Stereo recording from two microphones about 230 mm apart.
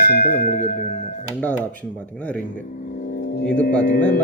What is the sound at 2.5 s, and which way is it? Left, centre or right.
Vehicle, left.